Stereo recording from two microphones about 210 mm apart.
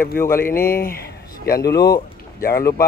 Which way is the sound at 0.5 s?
45° left (ahead or behind).